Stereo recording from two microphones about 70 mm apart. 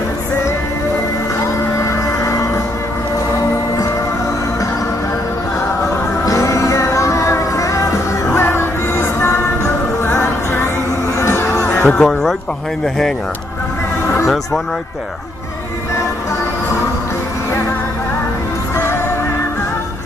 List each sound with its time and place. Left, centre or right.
1.8 s music: left
6.2 s music: left
8.3 s music: left
11.8 s speech: centre
14.0 s a sound: left